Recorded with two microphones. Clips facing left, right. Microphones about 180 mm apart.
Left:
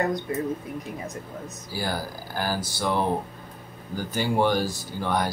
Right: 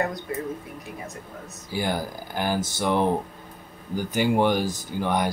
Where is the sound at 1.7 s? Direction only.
20° right (ahead or behind).